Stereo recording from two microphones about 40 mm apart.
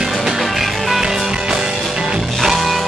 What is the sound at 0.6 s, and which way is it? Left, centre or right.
Music, centre.